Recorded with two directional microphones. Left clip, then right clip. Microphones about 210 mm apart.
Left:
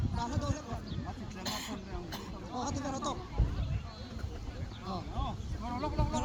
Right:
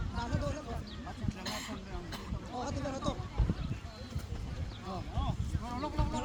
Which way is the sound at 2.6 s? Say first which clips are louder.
Left 1 dB; 55° left (ahead or behind).